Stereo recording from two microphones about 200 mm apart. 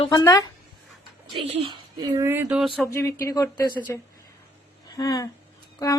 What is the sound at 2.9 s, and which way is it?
Speech, 15° left (ahead or behind).